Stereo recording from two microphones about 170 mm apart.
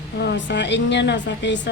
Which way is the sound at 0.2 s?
85° left.